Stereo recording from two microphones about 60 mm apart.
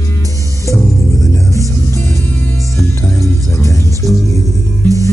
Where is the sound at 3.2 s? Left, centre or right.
Left.